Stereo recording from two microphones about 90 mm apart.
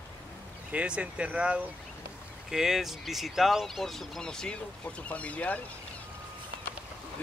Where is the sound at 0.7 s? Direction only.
15° right (ahead or behind); by 5.6 s 15° left (ahead or behind).